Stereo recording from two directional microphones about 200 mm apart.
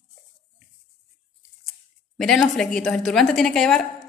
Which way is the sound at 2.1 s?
Centre (ahead or behind).